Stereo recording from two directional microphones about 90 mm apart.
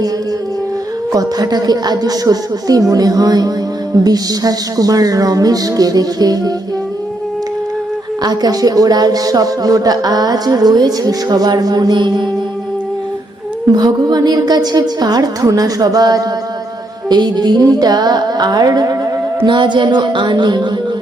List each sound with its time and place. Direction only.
1.1 s speech: 45° right (ahead or behind)
8.2 s speech: 45° right (ahead or behind)
13.7 s speech: 50° right (ahead or behind)
19.5 s music: 60° right (ahead or behind)